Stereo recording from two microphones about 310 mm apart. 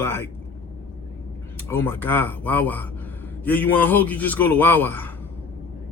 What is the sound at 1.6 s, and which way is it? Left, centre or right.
A man's voice, centre.